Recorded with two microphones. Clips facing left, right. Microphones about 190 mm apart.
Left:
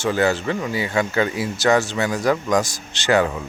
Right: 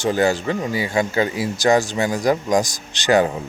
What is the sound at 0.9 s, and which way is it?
Speech, 35° right (ahead or behind).